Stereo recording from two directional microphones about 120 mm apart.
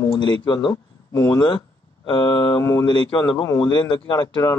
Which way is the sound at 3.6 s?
40° left (ahead or behind).